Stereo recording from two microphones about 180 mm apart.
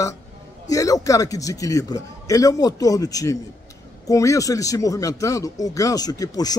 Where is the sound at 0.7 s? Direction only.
20° left (ahead or behind).